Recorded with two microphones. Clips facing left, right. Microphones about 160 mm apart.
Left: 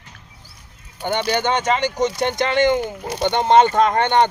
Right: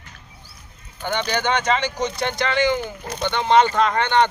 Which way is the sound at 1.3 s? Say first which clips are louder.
Left 1 dB; 20° left (ahead or behind).